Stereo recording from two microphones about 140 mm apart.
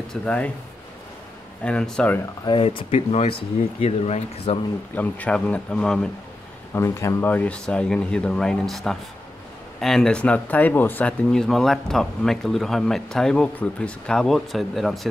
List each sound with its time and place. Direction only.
0.1 s speech: 10° left (ahead or behind)
1.6 s speech: 5° left (ahead or behind)
2.4 s speech: 35° left (ahead or behind)
4.9 s speech: 10° left (ahead or behind)
6.7 s speech: 20° left (ahead or behind); by 15.0 s centre (ahead or behind)